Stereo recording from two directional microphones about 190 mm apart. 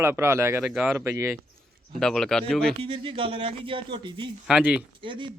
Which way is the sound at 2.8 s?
25° right (ahead or behind).